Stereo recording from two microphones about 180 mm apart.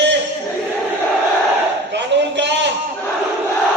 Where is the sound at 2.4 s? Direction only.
75° right (ahead or behind).